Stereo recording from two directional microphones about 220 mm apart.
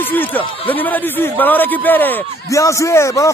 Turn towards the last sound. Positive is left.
turn(degrees=15)  # may be behind; listen again after turning